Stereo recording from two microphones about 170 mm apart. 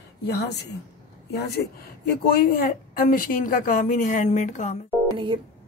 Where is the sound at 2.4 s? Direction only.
60° left (ahead or behind).